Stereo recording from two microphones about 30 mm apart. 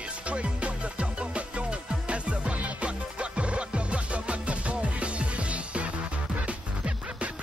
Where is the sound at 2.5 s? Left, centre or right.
Right.